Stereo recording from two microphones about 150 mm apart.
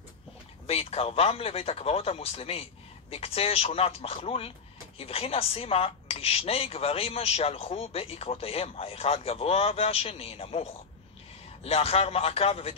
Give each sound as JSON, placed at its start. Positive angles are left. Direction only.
{"t": 0.7, "sound": "a woman's voice", "side_deg": 40}